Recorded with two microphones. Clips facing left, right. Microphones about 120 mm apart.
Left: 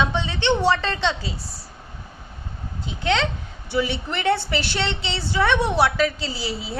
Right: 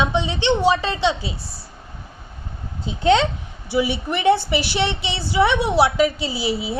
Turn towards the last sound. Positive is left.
turn(degrees=-10)  # may be behind; listen again after turning